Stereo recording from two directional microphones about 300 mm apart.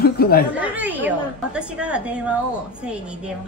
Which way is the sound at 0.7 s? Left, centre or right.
Centre.